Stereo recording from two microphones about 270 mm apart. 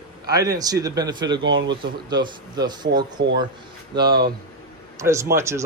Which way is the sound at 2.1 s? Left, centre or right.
Centre.